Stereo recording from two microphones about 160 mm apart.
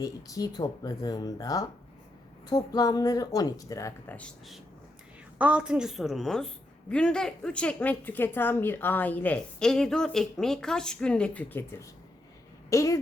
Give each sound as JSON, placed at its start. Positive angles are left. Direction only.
{"t": 0.0, "sound": "speech", "side_deg": 20}
{"t": 4.2, "sound": "a woman's voice", "side_deg": 0}